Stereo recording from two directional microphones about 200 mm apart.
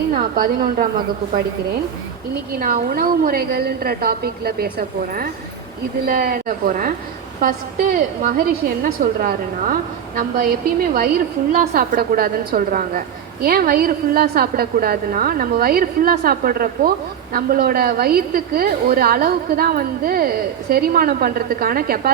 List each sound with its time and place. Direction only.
0.1 s a woman's voice: 45° right (ahead or behind)
2.5 s a woman's voice: 45° right (ahead or behind)